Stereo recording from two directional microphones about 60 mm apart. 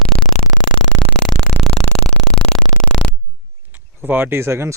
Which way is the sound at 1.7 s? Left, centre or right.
Centre.